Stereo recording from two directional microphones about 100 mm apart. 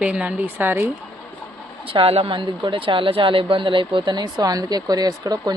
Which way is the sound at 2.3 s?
50° right (ahead or behind).